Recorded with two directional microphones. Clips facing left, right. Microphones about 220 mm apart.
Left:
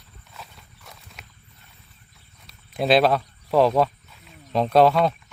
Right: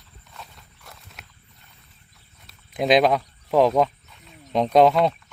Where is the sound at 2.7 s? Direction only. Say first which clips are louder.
Even; 15° right (ahead or behind).